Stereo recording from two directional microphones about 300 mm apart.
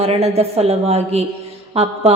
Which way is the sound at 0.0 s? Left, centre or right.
Centre.